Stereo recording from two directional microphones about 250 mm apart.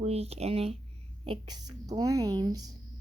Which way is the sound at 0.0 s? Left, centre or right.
Right.